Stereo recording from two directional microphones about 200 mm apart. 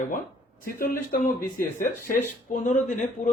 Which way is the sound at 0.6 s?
45° left (ahead or behind).